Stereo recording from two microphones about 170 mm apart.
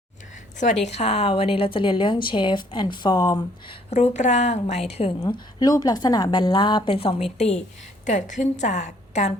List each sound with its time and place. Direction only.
0.6 s a woman's voice: 45° left (ahead or behind); by 3.8 s 25° left (ahead or behind)
3.8 s a woman's voice: 40° left (ahead or behind)
5.2 s a woman's voice: 20° left (ahead or behind); by 9.3 s 45° left (ahead or behind)